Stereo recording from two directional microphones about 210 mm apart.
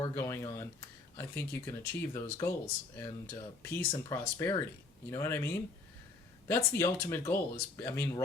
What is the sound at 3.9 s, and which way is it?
Speech, 15° left (ahead or behind).